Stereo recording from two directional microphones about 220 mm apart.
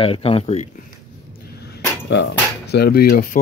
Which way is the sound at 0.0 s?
25° left (ahead or behind).